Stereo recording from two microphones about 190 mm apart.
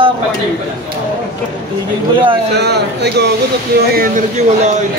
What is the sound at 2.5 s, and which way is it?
Speech, 60° right (ahead or behind).